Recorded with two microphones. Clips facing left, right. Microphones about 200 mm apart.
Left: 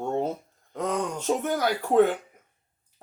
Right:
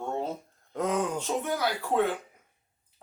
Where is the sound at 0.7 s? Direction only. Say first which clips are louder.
Even; centre (ahead or behind).